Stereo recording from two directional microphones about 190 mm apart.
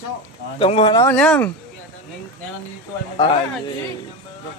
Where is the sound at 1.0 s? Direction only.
5° left (ahead or behind).